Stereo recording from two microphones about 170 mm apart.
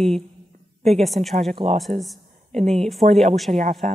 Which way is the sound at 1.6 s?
25° right (ahead or behind).